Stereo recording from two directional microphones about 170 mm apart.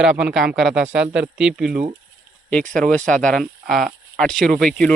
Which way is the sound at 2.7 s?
5° left (ahead or behind).